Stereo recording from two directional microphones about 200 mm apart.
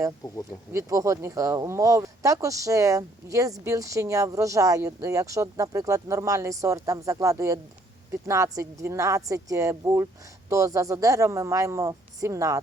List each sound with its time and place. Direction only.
0.7 s speech: 15° right (ahead or behind)